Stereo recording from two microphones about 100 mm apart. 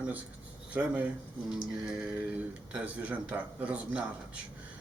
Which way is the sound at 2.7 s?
15° right (ahead or behind).